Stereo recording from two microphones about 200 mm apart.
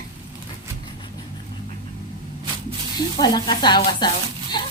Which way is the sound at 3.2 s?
20° left (ahead or behind).